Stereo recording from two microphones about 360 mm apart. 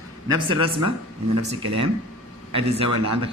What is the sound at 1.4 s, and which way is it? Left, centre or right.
Speech, centre.